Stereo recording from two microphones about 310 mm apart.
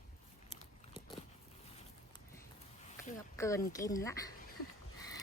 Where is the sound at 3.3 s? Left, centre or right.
Centre.